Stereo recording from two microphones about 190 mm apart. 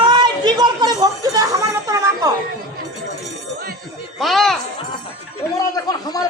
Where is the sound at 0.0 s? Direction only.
25° right (ahead or behind).